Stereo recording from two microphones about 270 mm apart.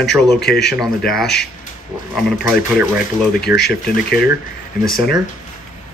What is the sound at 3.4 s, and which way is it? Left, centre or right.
Speech, left.